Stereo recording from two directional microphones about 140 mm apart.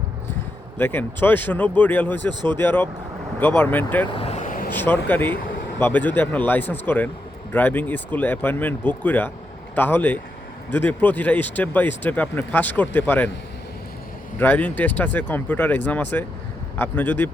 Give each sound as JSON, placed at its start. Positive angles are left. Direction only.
{"t": 0.8, "sound": "speech", "side_deg": 15}
{"t": 4.1, "sound": "vehicle", "side_deg": 45}
{"t": 4.7, "sound": "speech", "side_deg": 15}
{"t": 14.3, "sound": "speech", "side_deg": 10}